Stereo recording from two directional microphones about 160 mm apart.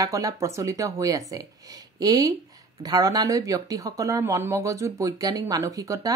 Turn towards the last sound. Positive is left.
turn(degrees=-20)  # may be behind; listen again after turning